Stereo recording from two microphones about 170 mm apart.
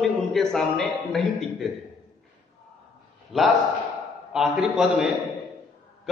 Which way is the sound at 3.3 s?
Centre (ahead or behind).